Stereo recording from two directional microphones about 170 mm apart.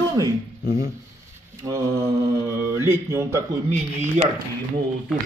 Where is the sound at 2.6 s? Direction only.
15° right (ahead or behind).